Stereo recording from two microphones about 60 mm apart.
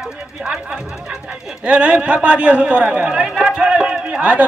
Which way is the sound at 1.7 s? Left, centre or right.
Right.